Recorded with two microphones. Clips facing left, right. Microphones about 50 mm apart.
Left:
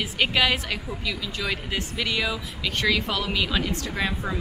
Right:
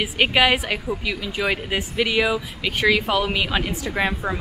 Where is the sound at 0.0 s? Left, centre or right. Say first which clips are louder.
Right 4 dB; centre.